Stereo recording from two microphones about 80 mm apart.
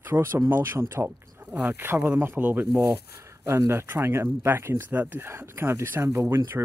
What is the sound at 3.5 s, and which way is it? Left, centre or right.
Speech, right.